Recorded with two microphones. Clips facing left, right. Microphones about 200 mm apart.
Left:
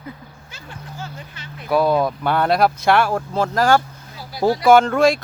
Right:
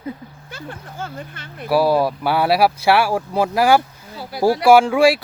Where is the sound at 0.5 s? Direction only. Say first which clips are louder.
Right 4 dB; 55° right (ahead or behind).